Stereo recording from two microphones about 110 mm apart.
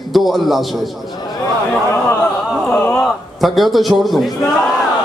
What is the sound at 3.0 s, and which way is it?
A man's voice, centre (ahead or behind).